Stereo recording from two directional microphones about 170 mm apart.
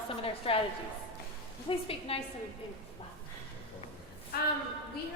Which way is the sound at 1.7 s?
35° left (ahead or behind).